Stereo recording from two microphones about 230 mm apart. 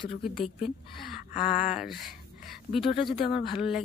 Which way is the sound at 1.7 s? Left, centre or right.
Centre.